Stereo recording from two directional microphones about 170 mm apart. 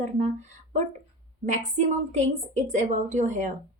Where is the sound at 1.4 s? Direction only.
45° right (ahead or behind).